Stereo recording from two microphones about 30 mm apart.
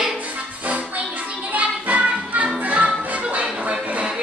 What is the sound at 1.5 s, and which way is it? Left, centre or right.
Music, right.